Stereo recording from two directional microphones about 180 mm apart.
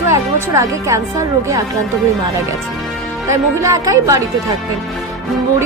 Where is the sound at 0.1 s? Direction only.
15° right (ahead or behind).